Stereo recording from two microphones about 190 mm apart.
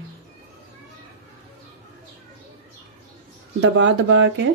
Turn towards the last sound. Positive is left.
turn(degrees=-75)  # may be behind; listen again after turning